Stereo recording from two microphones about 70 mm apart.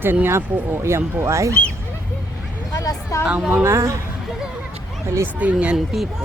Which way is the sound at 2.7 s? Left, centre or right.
Left.